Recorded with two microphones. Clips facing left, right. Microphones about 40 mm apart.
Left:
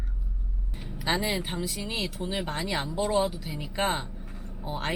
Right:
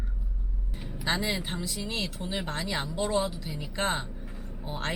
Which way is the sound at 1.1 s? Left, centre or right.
Centre.